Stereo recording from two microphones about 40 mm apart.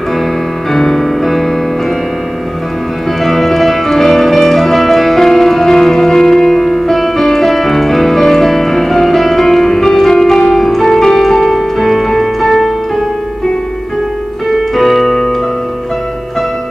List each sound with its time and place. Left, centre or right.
0.7 s music: centre
3.3 s music: centre
14.5 s keyboard: centre